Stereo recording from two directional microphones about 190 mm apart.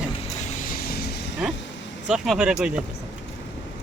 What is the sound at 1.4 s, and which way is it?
Speech, 5° right (ahead or behind).